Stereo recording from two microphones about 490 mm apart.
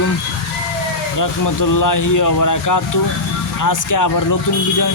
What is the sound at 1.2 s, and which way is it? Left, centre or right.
Speech, left.